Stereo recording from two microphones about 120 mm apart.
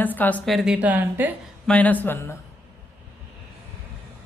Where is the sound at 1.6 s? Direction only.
10° left (ahead or behind).